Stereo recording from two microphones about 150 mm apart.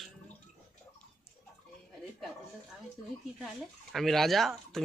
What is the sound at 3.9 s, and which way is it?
Speech, centre (ahead or behind).